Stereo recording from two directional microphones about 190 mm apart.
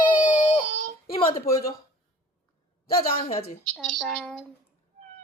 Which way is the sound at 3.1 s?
35° left (ahead or behind).